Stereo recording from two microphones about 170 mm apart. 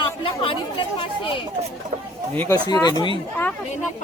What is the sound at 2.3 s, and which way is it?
Speech, 10° left (ahead or behind).